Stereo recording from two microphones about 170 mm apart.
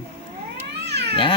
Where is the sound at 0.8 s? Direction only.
80° right.